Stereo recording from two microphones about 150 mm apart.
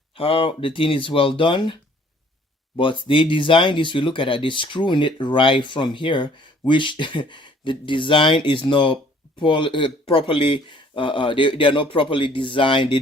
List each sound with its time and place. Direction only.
0.1 s speech: 40° left (ahead or behind)
2.7 s speech: 35° left (ahead or behind)